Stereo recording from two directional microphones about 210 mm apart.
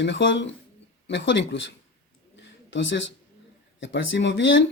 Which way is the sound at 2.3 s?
60° left (ahead or behind).